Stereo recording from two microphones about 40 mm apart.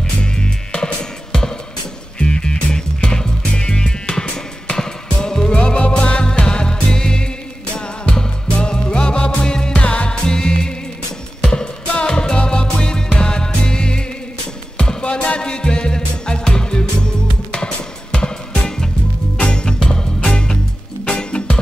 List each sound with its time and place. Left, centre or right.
0.2 s music: left
2.1 s music: left
9.8 s music: left